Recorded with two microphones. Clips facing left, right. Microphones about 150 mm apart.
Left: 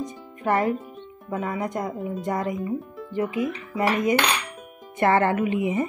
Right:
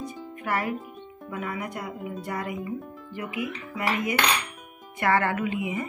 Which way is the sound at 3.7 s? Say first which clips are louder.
Left 5 dB; 35° left (ahead or behind).